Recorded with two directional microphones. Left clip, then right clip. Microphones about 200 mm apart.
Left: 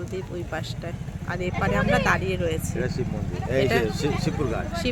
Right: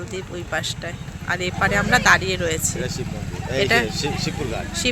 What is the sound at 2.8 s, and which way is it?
Speech, 45° left (ahead or behind).